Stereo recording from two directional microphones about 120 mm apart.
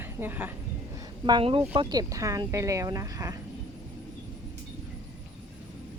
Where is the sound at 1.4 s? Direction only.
50° right (ahead or behind).